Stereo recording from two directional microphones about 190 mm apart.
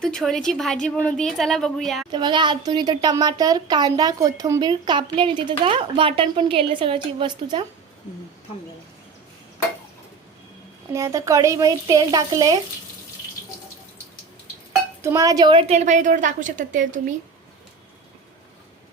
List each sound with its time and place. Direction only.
0.0 s a woman's voice: centre (ahead or behind)
2.1 s speech: 25° right (ahead or behind)
10.9 s speech: 15° right (ahead or behind)
15.0 s a woman's voice: 15° right (ahead or behind); by 17.0 s 45° right (ahead or behind)